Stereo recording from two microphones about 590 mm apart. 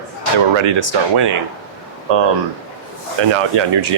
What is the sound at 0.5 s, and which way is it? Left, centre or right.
Speech, right.